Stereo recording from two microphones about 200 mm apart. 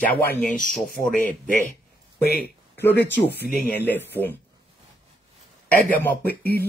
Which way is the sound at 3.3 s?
55° left (ahead or behind).